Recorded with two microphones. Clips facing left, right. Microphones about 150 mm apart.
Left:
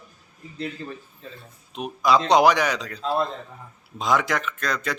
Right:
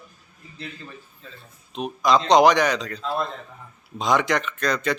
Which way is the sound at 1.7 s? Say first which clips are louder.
Even; 10° left (ahead or behind).